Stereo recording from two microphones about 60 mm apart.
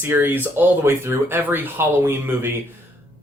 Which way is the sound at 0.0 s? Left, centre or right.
Right.